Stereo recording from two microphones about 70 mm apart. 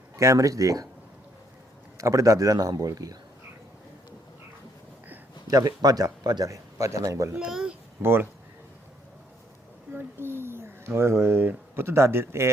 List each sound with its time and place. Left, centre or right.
0.2 s speech: right
2.0 s speech: right
5.5 s speech: right
6.5 s speech: right
7.3 s speech: centre
8.0 s speech: right
9.9 s speech: right